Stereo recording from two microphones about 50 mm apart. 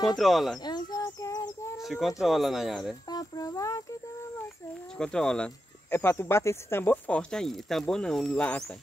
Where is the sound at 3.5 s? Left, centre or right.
Left.